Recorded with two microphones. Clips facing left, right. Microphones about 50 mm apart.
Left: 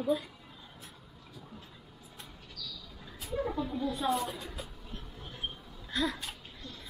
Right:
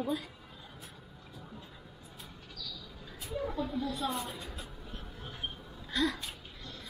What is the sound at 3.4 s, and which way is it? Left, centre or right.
Speech, centre.